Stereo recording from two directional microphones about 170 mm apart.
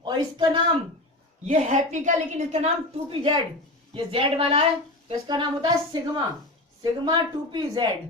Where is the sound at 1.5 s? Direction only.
45° right (ahead or behind).